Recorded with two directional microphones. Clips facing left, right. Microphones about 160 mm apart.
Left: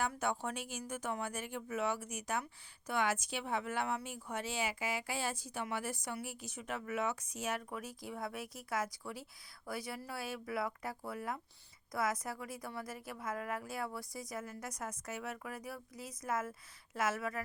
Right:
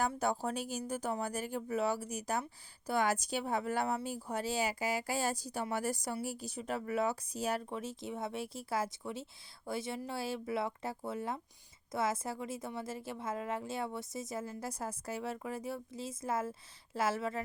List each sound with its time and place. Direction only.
0.1 s a woman's voice: 35° right (ahead or behind)